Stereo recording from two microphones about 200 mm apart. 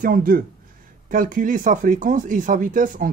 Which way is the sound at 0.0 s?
45° right (ahead or behind).